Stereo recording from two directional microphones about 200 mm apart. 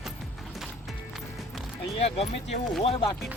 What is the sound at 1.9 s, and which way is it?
Speech, 30° left (ahead or behind).